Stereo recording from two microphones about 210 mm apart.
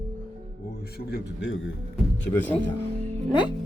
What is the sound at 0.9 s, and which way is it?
Speech, 55° left (ahead or behind).